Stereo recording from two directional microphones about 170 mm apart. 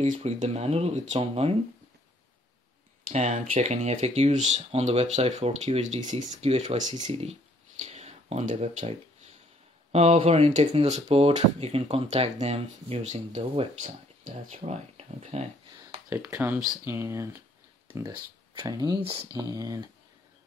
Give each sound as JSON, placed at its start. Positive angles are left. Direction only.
{"t": 0.0, "sound": "speech", "side_deg": -45}
{"t": 3.1, "sound": "speech", "side_deg": -45}
{"t": 9.9, "sound": "speech", "side_deg": -40}
{"t": 16.1, "sound": "speech", "side_deg": -15}